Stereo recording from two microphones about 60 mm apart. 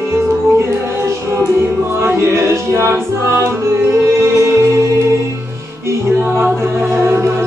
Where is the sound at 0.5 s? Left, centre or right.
Right.